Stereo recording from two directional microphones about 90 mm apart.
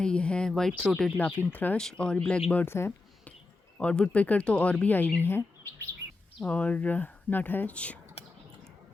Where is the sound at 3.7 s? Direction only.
10° left (ahead or behind).